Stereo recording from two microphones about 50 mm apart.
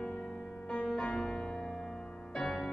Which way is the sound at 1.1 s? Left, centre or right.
Centre.